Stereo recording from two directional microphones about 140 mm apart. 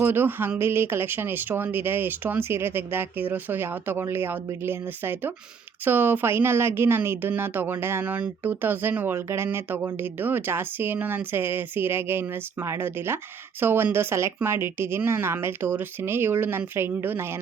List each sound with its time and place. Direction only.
0.0 s speech: 15° right (ahead or behind)